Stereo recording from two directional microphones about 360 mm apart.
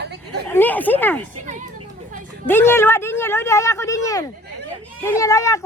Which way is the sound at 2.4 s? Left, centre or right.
Centre.